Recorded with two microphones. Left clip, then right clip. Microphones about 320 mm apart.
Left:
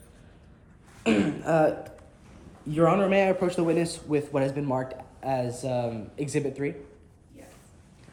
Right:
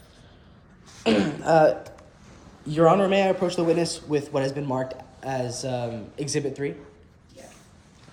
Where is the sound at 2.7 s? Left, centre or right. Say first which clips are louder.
Right 4 dB; centre.